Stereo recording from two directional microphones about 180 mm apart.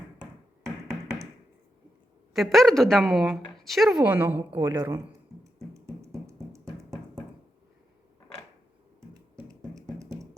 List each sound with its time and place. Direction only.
2.3 s a woman's voice: centre (ahead or behind); by 5.0 s 20° right (ahead or behind)
5.5 s music: 15° right (ahead or behind)
9.7 s music: 20° right (ahead or behind)